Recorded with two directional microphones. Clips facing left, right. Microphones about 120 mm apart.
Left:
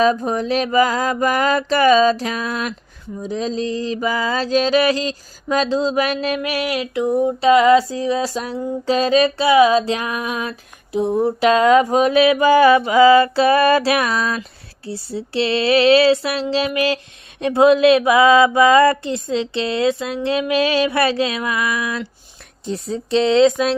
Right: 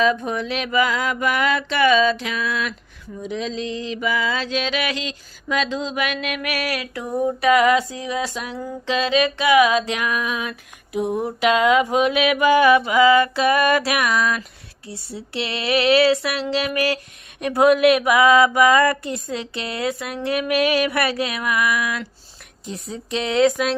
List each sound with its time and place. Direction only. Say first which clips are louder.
0.0 s mantra: left 3 dB; 35° left (ahead or behind)